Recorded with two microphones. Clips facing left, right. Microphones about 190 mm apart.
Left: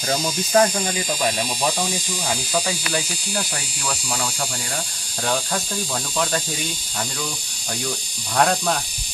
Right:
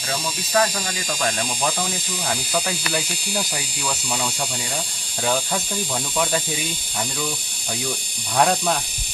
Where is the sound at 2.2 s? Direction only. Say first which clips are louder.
Even; centre (ahead or behind).